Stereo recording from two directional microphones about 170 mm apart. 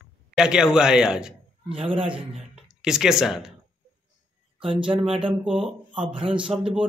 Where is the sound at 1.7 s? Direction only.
30° right (ahead or behind).